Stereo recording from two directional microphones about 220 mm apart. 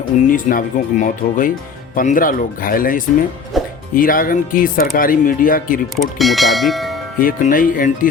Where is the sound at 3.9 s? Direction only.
40° left (ahead or behind).